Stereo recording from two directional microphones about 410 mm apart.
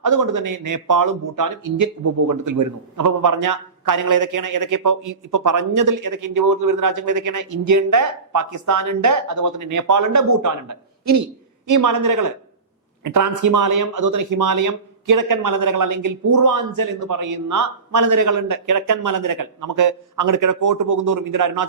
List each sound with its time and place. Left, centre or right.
0.0 s speech: right